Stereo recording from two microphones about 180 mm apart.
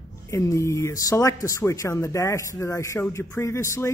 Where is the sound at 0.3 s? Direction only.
15° left (ahead or behind).